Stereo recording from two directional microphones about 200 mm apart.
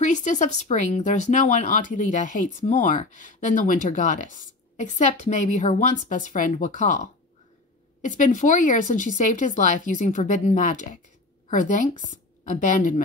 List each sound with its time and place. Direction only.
0.0 s a woman's voice: 35° left (ahead or behind)